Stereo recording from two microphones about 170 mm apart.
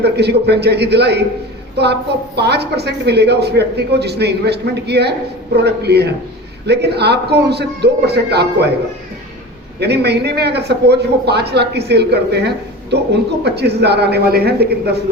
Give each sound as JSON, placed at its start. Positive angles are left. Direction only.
{"t": 0.0, "sound": "a woman's voice", "side_deg": -75}
{"t": 9.8, "sound": "a woman's voice", "side_deg": -75}